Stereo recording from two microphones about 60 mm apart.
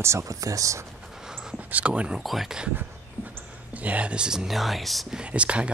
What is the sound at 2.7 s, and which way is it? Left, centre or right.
Dog, right.